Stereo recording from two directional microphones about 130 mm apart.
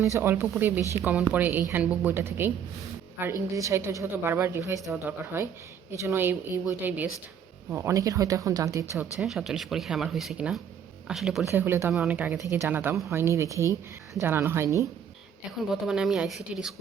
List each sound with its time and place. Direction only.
0.0 s a woman's voice: 20° right (ahead or behind)
9.2 s speech: centre (ahead or behind)
11.4 s a woman's voice: 15° right (ahead or behind)
15.7 s speech: 5° right (ahead or behind)